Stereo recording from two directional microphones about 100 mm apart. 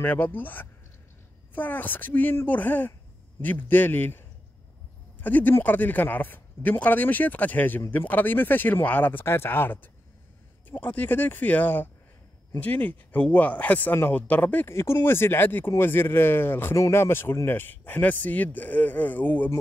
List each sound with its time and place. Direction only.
0.0 s speech: 20° left (ahead or behind)
5.2 s speech: 20° left (ahead or behind)